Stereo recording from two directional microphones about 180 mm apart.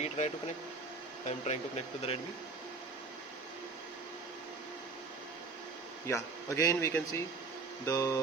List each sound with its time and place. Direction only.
0.0 s speech: 40° left (ahead or behind)
6.1 s speech: 15° left (ahead or behind)